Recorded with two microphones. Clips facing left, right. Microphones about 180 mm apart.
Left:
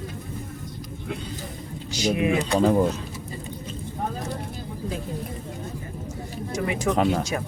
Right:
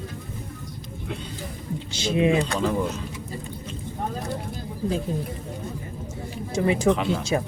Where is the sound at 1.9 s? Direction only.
25° right (ahead or behind).